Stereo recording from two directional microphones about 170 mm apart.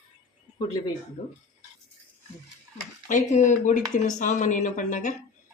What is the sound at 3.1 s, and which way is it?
Speech, 45° left (ahead or behind).